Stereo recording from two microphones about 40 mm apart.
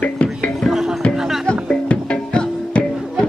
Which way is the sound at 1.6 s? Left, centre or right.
Left.